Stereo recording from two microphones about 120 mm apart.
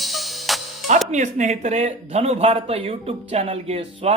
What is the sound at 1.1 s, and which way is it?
Speech, 90° right.